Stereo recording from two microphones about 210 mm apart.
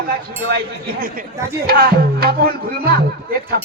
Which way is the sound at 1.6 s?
45° right (ahead or behind).